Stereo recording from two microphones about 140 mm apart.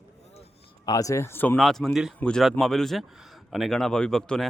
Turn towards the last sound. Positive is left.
turn(degrees=5)  # may be behind; listen again after turning